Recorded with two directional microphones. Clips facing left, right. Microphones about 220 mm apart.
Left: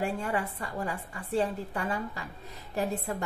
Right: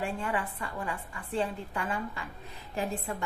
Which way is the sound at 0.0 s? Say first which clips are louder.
Left 2 dB; 40° left (ahead or behind).